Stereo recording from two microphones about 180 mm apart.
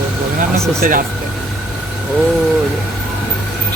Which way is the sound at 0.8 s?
50° right (ahead or behind).